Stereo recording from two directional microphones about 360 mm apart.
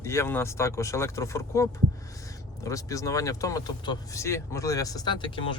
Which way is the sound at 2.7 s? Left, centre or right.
Centre.